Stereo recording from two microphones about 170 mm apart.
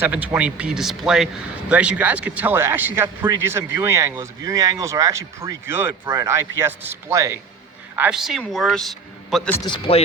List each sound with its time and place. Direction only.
0.0 s a man's voice: 10° right (ahead or behind)
9.6 s speech: 30° left (ahead or behind)